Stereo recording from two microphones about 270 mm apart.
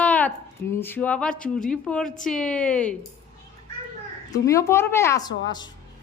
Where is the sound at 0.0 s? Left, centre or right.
Centre.